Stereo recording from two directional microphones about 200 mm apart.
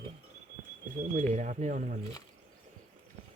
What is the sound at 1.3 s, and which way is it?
Speech, 35° right (ahead or behind).